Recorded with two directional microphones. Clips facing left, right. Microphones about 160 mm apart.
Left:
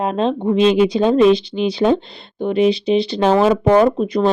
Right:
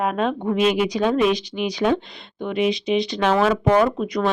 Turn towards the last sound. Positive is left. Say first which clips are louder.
# left 5 dB
turn(degrees=30)  # may be behind; listen again after turning